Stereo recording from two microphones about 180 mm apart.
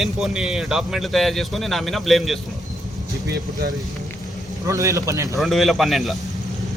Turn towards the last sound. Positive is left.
turn(degrees=0)  # may be behind; listen again after turning